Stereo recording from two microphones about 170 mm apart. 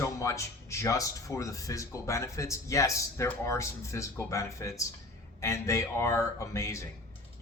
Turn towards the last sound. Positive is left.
turn(degrees=15)  # may be behind; listen again after turning